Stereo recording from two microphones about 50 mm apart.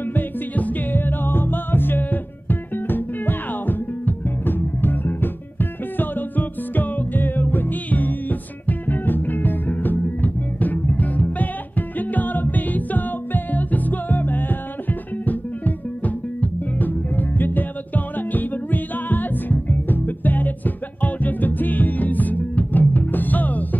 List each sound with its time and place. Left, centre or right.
0.1 s music: left